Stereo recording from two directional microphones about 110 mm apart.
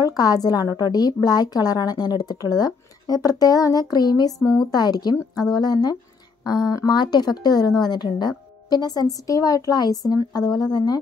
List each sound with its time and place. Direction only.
0.0 s a woman's voice: 35° left (ahead or behind)